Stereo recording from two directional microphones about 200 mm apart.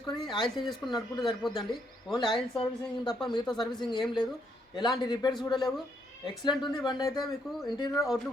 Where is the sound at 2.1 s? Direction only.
25° left (ahead or behind).